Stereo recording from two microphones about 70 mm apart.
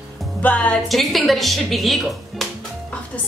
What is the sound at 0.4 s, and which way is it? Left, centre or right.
Speech, left.